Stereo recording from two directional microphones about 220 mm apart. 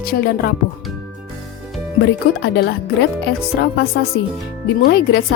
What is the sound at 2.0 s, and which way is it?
Speech, 50° left (ahead or behind).